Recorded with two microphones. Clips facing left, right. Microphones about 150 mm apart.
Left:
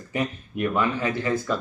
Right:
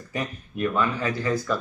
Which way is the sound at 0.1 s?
20° left (ahead or behind).